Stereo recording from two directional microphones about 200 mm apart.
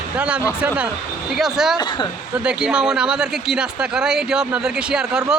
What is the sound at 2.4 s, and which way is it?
Speech, 5° right (ahead or behind).